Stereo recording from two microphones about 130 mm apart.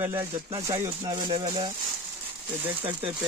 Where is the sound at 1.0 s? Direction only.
35° right (ahead or behind).